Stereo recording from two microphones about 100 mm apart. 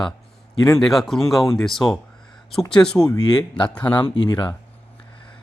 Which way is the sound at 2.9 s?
35° left (ahead or behind).